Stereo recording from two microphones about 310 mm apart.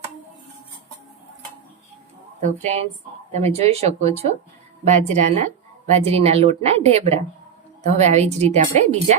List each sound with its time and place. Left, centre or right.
2.4 s a woman's voice: right